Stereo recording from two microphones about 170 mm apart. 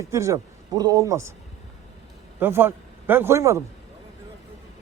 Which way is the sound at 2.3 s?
10° right (ahead or behind).